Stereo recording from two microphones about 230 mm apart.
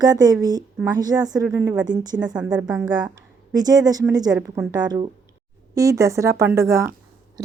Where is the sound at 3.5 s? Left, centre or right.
Centre.